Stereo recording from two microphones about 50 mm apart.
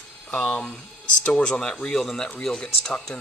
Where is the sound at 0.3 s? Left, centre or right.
Left.